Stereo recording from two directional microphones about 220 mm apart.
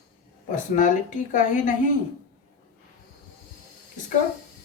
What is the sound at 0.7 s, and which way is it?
A woman's voice, 35° left (ahead or behind).